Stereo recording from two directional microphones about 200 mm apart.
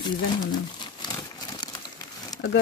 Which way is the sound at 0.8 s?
20° left (ahead or behind).